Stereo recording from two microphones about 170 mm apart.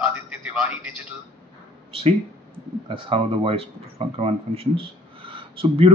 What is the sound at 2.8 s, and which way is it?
Speech, 30° right (ahead or behind).